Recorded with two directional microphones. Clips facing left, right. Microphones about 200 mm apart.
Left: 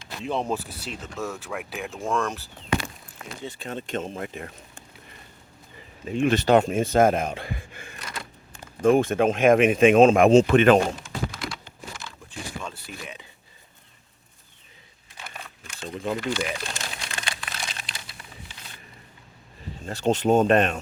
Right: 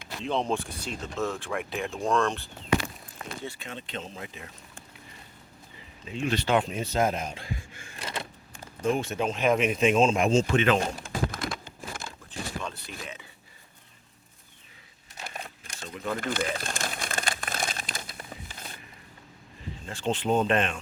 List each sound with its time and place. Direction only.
0.2 s speech: 5° left (ahead or behind)
3.2 s speech: 35° right (ahead or behind)
3.6 s speech: 45° left (ahead or behind)
6.1 s speech: 50° left (ahead or behind)
8.0 s vehicle: 25° right (ahead or behind)
8.8 s speech: 50° left (ahead or behind)
11.0 s a sound: 50° right (ahead or behind)
12.6 s a sound: 5° left (ahead or behind)
15.2 s crumpling: 40° right (ahead or behind)
16.1 s crumpling: 50° right (ahead or behind)
19.8 s speech: 40° left (ahead or behind)